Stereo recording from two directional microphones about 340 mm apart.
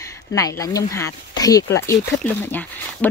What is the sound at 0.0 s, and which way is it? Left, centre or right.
Speech, centre.